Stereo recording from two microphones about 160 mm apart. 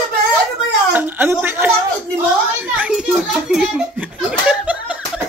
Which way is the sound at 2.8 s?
5° right (ahead or behind).